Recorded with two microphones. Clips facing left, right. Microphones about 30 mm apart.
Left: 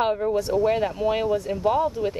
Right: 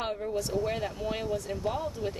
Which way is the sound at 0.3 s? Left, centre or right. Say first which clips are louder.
Left 9 dB; left.